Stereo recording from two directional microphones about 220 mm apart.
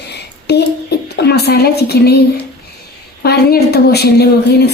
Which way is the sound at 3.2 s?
45° left (ahead or behind).